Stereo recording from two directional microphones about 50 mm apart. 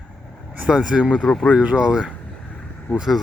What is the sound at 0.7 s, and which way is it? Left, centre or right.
Speech, centre.